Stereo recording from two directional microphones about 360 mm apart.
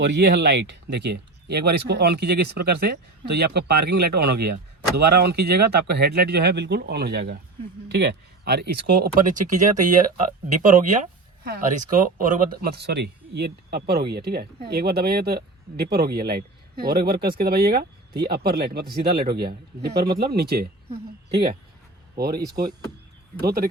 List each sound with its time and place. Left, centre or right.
0.0 s speech: right
22.1 s speech: right
23.4 s speech: right